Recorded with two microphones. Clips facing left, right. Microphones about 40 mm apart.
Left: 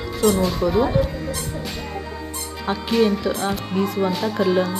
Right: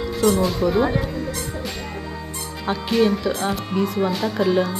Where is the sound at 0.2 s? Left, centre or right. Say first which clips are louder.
Even; centre.